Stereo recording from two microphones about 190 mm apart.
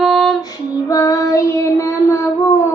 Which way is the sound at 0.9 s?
20° left (ahead or behind).